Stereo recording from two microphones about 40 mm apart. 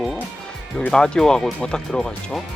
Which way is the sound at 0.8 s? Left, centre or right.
Centre.